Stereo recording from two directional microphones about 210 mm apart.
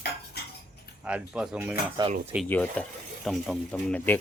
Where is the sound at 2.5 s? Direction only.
5° left (ahead or behind).